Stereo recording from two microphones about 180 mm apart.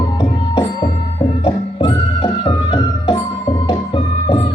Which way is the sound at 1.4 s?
30° left (ahead or behind).